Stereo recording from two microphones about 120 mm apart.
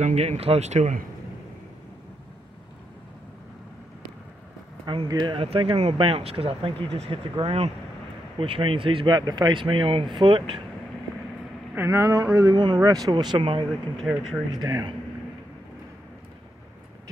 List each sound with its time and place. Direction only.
0.0 s speech: 65° right (ahead or behind)
5.0 s speech: 35° right (ahead or behind)
11.7 s speech: 20° right (ahead or behind); by 13.7 s 45° right (ahead or behind)
14.1 s speech: 10° right (ahead or behind)
14.6 s speech: 30° right (ahead or behind)